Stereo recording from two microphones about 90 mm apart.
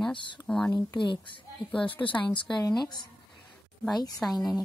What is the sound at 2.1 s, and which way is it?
Speech, 65° left (ahead or behind).